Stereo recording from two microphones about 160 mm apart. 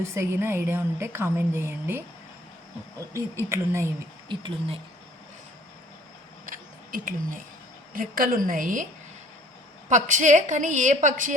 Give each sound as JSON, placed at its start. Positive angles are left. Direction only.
{"t": 0.0, "sound": "a woman's voice", "side_deg": -15}
{"t": 3.1, "sound": "a woman's voice", "side_deg": -15}
{"t": 4.3, "sound": "speech", "side_deg": -30}
{"t": 6.4, "sound": "a sound", "side_deg": -60}
{"t": 7.9, "sound": "a woman's voice", "side_deg": -65}
{"t": 9.9, "sound": "a woman's voice", "side_deg": -50}